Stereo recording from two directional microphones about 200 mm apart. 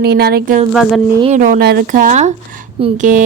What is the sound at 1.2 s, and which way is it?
Speech, 40° right (ahead or behind).